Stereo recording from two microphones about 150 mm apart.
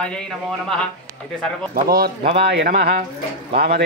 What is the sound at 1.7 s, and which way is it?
Speech, 90° right.